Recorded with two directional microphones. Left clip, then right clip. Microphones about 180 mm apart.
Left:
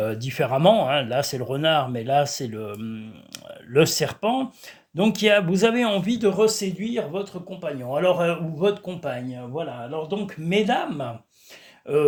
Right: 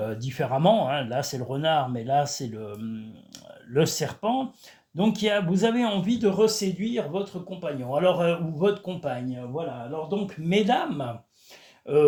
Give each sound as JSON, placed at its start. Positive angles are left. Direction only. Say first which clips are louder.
{"t": 0.0, "sound": "speech", "louder": "left 5 dB", "side_deg": 45}
{"t": 10.5, "sound": "speech", "louder": "left 1 dB", "side_deg": 20}